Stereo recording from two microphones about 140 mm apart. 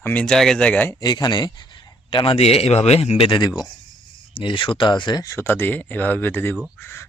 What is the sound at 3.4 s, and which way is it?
A man's voice, 30° left (ahead or behind).